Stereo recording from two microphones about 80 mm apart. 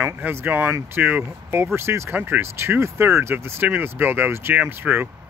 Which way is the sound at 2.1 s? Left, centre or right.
Right.